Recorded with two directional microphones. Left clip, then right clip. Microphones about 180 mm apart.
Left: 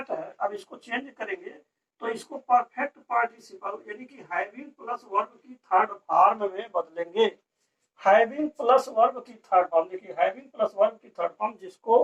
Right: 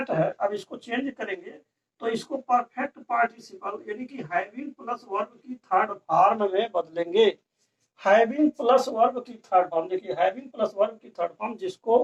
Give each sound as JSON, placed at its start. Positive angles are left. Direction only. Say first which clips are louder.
{"t": 0.0, "sound": "speech", "louder": "right 5 dB", "side_deg": -25}